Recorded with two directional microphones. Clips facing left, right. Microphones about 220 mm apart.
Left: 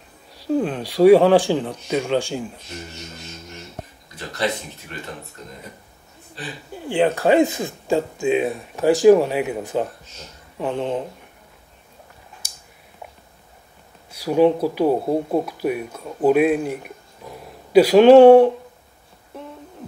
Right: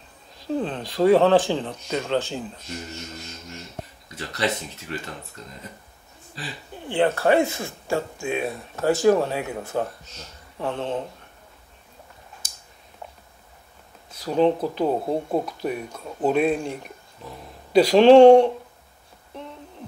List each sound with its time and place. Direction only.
0.5 s speech: 15° left (ahead or behind)
6.7 s speech: 15° left (ahead or behind)
12.4 s a sound: 10° left (ahead or behind)
14.1 s speech: 10° left (ahead or behind)